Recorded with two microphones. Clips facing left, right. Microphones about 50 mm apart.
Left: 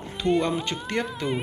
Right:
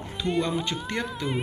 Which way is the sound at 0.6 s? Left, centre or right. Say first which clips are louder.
Left 2 dB; left.